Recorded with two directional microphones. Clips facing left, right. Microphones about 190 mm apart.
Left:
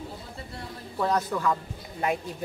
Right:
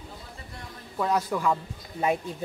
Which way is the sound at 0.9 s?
5° right (ahead or behind).